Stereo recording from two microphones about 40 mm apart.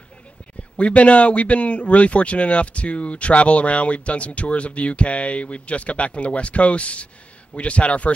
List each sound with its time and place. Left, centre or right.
0.7 s speech: left